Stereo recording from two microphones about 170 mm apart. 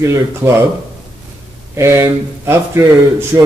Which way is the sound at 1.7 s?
15° right (ahead or behind).